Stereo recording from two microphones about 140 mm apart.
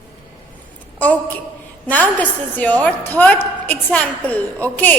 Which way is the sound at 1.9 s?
10° left (ahead or behind).